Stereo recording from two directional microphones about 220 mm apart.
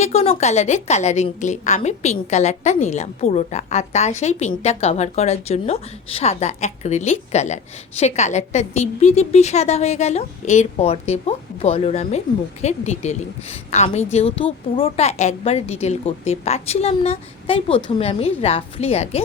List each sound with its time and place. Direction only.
0.0 s a woman's voice: 30° left (ahead or behind)